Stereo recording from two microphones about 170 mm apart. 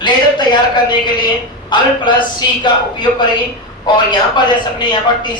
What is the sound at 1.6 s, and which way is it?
A man's voice, 25° left (ahead or behind).